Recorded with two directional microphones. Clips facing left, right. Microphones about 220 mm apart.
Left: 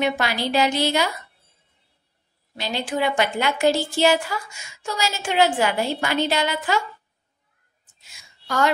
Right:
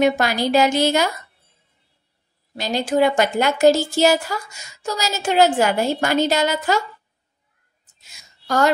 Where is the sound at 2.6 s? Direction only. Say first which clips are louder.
Right 6 dB; 45° right (ahead or behind).